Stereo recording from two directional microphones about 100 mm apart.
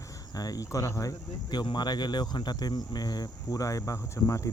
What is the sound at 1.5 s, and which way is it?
Speech, 45° left (ahead or behind).